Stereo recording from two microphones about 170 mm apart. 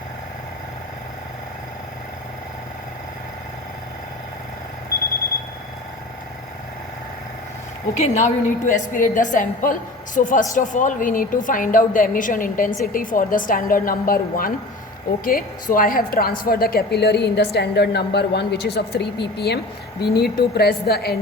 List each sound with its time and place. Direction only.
7.9 s a woman's voice: 45° left (ahead or behind); by 21.2 s 65° left (ahead or behind)